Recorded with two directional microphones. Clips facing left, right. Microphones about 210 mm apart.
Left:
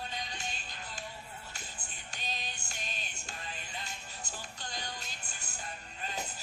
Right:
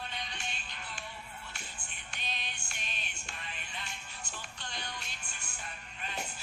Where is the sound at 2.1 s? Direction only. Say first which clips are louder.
Left 1 dB; 40° left (ahead or behind).